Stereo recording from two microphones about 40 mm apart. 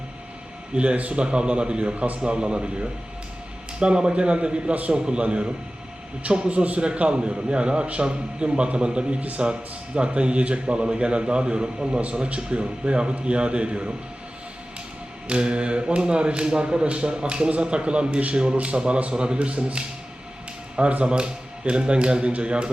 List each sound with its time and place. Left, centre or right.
0.7 s a man's voice: right
15.3 s a man's voice: right